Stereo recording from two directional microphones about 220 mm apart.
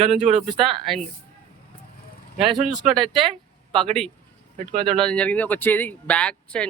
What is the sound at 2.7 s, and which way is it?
Speech, centre (ahead or behind).